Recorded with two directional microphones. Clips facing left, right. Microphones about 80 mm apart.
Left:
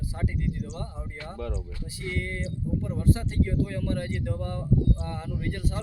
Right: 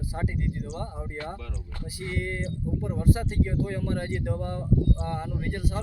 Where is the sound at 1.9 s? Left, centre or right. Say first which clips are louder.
Right 2 dB; right.